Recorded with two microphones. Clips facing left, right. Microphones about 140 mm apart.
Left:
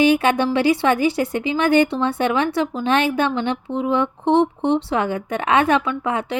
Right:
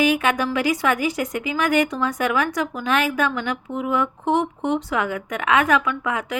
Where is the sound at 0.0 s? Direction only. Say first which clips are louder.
Left 4 dB; 30° left (ahead or behind).